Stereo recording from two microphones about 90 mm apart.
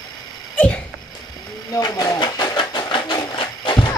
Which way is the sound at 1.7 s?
45° left (ahead or behind).